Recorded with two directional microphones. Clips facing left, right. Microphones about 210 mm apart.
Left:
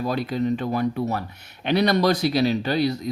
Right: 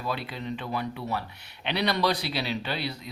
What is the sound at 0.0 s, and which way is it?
Speech, 40° left (ahead or behind).